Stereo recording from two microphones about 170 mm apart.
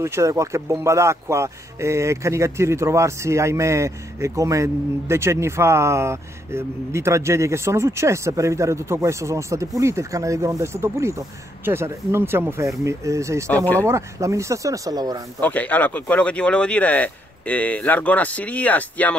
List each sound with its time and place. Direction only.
0.0 s speech: 15° right (ahead or behind)
15.4 s speech: 10° left (ahead or behind)